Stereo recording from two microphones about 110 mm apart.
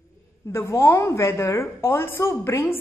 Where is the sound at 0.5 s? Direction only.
25° left (ahead or behind).